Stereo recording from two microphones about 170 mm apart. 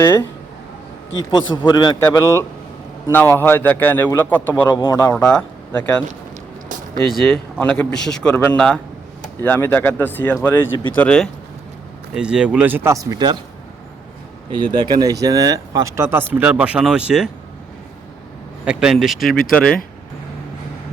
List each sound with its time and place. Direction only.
0.0 s speech: 15° left (ahead or behind)
1.6 s a man's voice: 25° left (ahead or behind)
4.7 s a man's voice: 20° left (ahead or behind)
5.1 s speech: 5° left (ahead or behind)
7.1 s speech: centre (ahead or behind)
12.1 s speech: 5° right (ahead or behind); by 13.4 s 25° right (ahead or behind)
14.5 s speech: 25° right (ahead or behind); by 17.2 s 5° right (ahead or behind)
18.6 s speech: 5° right (ahead or behind)